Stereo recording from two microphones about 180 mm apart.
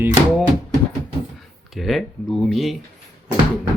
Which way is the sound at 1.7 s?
Centre (ahead or behind).